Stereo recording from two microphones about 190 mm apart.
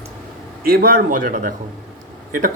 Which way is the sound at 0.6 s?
50° right (ahead or behind).